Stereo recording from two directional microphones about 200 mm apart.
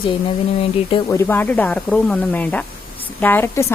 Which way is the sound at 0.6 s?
30° left (ahead or behind).